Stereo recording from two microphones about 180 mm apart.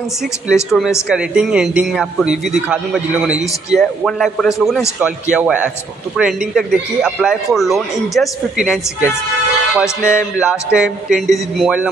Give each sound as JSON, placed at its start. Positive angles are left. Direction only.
{"t": 0.7, "sound": "a man's voice", "side_deg": 0}